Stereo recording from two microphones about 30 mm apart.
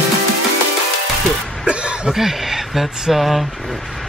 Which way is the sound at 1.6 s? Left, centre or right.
Right.